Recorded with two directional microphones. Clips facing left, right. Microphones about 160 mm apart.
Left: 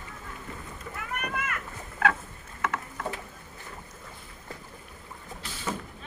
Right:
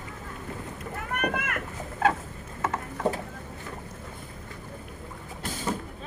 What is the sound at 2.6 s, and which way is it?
Mechanisms, 35° right (ahead or behind).